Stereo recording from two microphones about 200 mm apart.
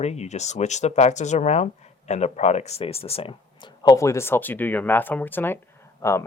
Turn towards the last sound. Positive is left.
turn(degrees=15)  # may be behind; listen again after turning